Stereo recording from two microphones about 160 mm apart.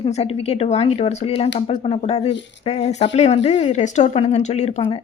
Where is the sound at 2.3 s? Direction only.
90° left.